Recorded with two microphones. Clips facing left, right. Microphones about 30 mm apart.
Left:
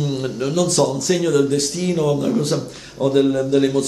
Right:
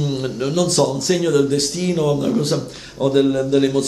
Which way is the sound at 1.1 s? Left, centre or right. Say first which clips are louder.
Right 1 dB; centre.